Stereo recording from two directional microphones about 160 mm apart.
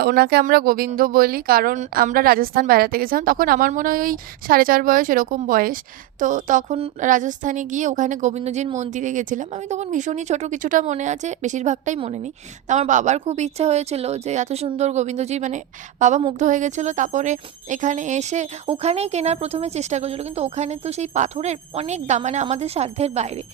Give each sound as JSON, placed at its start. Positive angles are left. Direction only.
{"t": 0.0, "sound": "a woman's voice", "side_deg": -80}